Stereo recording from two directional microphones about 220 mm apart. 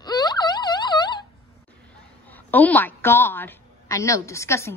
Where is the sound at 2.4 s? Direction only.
10° left (ahead or behind).